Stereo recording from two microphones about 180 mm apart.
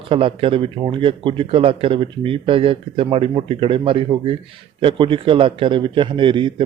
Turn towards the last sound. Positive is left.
turn(degrees=-25)  # may be behind; listen again after turning